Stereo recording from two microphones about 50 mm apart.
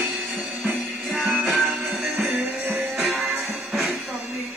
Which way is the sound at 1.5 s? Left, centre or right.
Centre.